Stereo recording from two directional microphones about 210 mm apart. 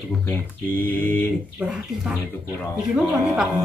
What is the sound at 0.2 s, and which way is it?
Speech, 10° left (ahead or behind).